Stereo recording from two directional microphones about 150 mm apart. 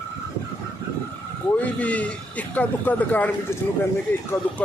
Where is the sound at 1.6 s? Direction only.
10° left (ahead or behind).